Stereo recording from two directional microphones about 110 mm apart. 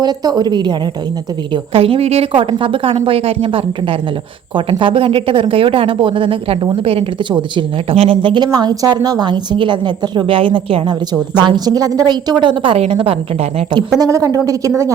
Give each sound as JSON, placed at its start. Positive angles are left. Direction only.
{"t": 0.0, "sound": "a woman's voice", "side_deg": -40}
{"t": 1.7, "sound": "a woman's voice", "side_deg": -60}
{"t": 4.8, "sound": "a woman's voice", "side_deg": -50}
{"t": 12.7, "sound": "a woman's voice", "side_deg": -65}
{"t": 14.0, "sound": "a woman's voice", "side_deg": -30}